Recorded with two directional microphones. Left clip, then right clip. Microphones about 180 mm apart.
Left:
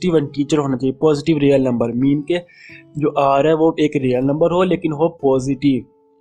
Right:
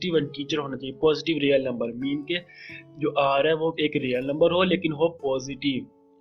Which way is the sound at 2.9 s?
40° left (ahead or behind).